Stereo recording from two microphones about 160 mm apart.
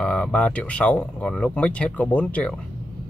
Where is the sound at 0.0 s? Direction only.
5° left (ahead or behind).